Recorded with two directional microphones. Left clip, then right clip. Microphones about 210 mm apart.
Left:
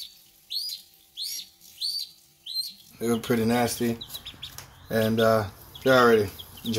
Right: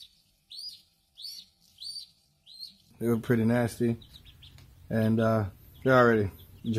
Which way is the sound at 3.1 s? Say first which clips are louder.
Left 3 dB; 50° right (ahead or behind).